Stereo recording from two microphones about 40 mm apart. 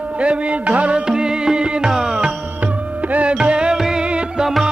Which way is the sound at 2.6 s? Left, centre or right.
Right.